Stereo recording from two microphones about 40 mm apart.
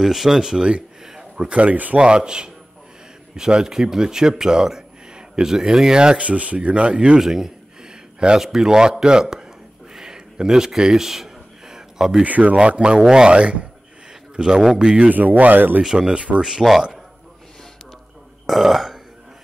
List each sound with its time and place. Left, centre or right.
0.0 s speech: centre
0.4 s speech: centre
1.6 s speech: right
2.0 s speech: right
7.2 s a sound: centre
8.4 s speech: centre
9.9 s a sound: centre
12.2 s speech: right
12.5 s speech: right
13.0 s speech: centre
13.4 s a man's voice: right
15.0 s speech: right
15.8 s speech: centre
18.5 s burping: centre